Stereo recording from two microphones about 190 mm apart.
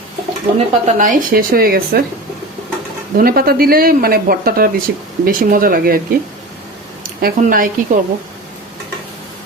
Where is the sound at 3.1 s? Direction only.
50° right (ahead or behind).